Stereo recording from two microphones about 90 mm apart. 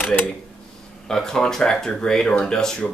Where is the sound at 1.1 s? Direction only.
5° left (ahead or behind).